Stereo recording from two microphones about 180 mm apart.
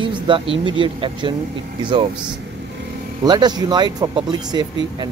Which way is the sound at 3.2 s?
25° right (ahead or behind).